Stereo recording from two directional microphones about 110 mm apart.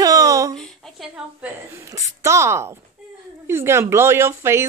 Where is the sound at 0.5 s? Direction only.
5° left (ahead or behind).